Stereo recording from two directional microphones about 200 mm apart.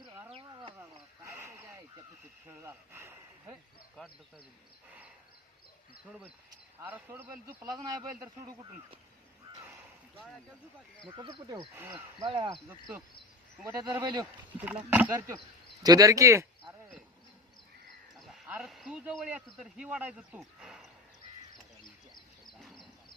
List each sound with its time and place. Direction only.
0.3 s a sound: 25° right (ahead or behind)
0.8 s sheep: 10° right (ahead or behind)
2.6 s speech: 10° right (ahead or behind)
6.7 s speech: 10° right (ahead or behind)
7.6 s speech: 20° right (ahead or behind)
10.2 s speech: centre (ahead or behind)
11.1 s speech: 25° right (ahead or behind)
11.8 s speech: 10° right (ahead or behind)
12.2 s speech: 25° right (ahead or behind)
13.6 s speech: 15° right (ahead or behind)
18.2 s speech: 5° right (ahead or behind)
21.5 s a sound: 20° left (ahead or behind)
22.6 s a sound: centre (ahead or behind)